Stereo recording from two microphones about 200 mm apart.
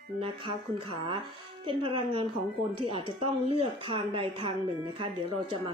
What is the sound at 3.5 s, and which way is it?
A woman's voice, 25° right (ahead or behind).